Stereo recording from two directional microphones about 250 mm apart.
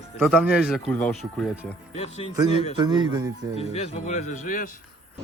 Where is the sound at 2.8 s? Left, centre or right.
Centre.